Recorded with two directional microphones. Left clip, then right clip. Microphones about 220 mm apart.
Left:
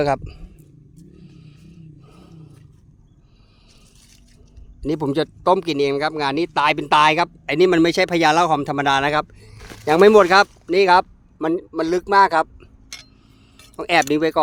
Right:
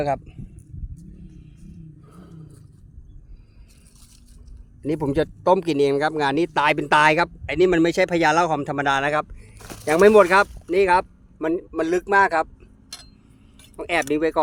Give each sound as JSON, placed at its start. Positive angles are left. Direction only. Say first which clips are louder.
{"t": 0.0, "sound": "a man's voice", "louder": "left 4 dB", "side_deg": 30}
{"t": 2.0, "sound": "a sound", "louder": "right 1 dB", "side_deg": 0}
{"t": 4.8, "sound": "speech", "louder": "left 1 dB", "side_deg": 10}
{"t": 7.5, "sound": "a man's voice", "louder": "left 3 dB", "side_deg": 25}